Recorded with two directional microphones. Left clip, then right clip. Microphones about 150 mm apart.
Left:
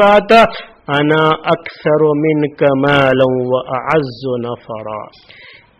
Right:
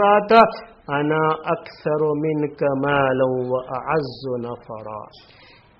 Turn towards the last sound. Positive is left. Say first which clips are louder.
# left 8 dB
turn(degrees=30)  # may be behind; listen again after turning